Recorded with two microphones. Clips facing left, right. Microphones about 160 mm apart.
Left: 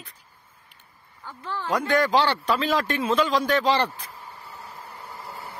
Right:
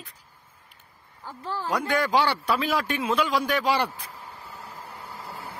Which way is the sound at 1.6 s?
10° right (ahead or behind).